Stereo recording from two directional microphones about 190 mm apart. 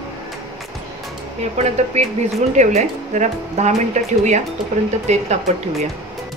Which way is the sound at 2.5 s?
40° right (ahead or behind).